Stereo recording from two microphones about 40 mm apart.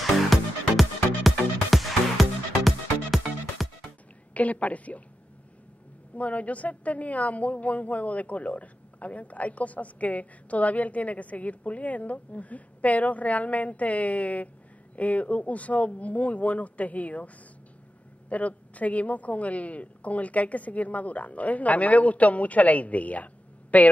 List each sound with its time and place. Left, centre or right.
0.0 s music: centre
4.3 s a woman's voice: left
6.1 s a woman's voice: left
18.3 s a woman's voice: left